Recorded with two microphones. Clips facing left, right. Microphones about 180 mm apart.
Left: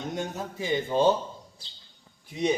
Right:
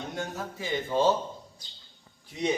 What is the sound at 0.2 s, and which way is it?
Speech, 20° left (ahead or behind).